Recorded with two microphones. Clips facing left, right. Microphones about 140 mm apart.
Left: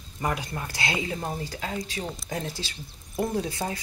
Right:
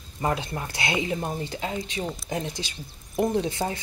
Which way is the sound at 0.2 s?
25° right (ahead or behind).